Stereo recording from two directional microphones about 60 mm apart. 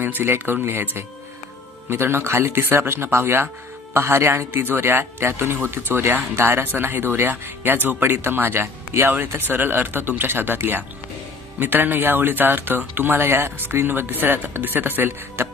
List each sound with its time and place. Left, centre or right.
0.0 s a man's voice: right